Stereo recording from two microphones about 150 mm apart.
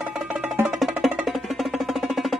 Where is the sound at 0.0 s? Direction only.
5° right (ahead or behind).